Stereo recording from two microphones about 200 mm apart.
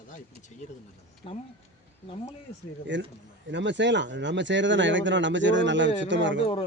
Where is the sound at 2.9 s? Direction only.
65° right (ahead or behind).